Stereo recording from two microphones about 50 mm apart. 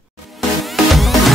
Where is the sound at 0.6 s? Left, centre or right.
Centre.